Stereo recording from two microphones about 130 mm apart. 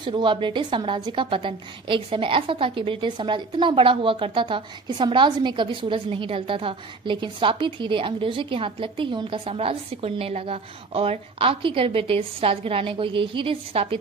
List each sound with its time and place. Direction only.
0.0 s a woman's voice: 40° right (ahead or behind)